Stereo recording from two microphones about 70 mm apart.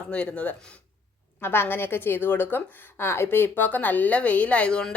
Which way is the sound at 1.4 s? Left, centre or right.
Left.